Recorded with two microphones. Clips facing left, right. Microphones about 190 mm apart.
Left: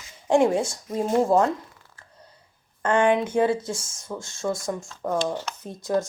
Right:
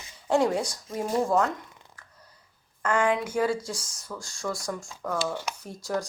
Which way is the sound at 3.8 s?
25° left (ahead or behind).